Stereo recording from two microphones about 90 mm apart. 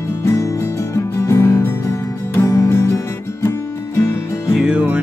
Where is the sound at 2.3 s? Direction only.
30° left (ahead or behind).